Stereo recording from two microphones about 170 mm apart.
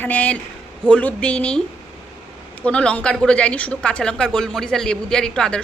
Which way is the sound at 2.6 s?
5° left (ahead or behind).